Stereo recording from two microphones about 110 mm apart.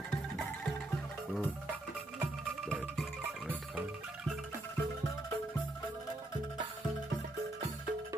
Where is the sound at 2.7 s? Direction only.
Centre (ahead or behind).